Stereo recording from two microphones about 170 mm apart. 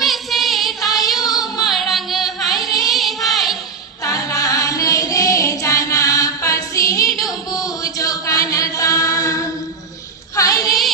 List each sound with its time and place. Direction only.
0.0 s child singing: centre (ahead or behind)
0.9 s female singing: 20° left (ahead or behind)
1.2 s music: 20° left (ahead or behind)
1.6 s music: centre (ahead or behind)
2.6 s music: 20° left (ahead or behind)
2.9 s child singing: centre (ahead or behind)
4.0 s singing: 20° left (ahead or behind)
7.3 s chant: 20° left (ahead or behind)
10.3 s child singing: 20° left (ahead or behind)